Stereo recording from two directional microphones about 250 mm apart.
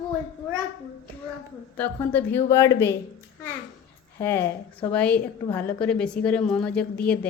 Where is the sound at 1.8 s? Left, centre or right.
Centre.